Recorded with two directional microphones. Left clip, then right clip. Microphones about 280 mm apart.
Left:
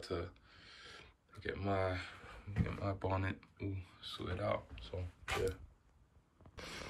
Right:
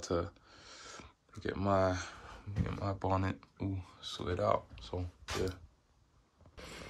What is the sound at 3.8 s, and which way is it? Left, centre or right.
Speech, centre.